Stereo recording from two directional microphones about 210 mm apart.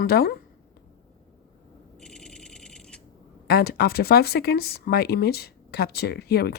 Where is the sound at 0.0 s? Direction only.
45° left (ahead or behind).